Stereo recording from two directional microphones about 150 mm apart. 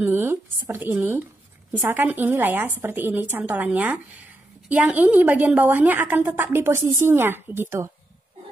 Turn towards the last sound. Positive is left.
turn(degrees=-15)  # may be behind; listen again after turning